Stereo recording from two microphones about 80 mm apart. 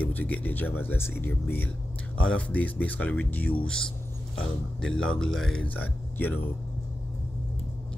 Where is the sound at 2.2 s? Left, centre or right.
Centre.